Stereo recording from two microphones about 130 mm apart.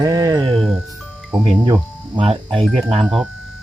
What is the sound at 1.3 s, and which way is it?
Speech, 5° right (ahead or behind).